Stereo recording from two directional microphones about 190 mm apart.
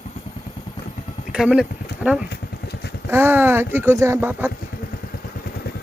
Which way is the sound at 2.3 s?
60° left (ahead or behind).